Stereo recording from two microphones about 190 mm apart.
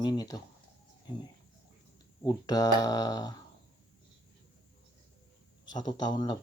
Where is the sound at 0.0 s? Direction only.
20° left (ahead or behind).